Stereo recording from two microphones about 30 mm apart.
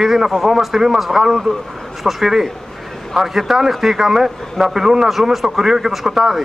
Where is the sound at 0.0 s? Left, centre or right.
Centre.